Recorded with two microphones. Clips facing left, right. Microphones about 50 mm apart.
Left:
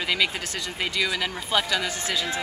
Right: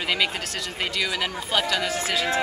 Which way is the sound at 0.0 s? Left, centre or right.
Centre.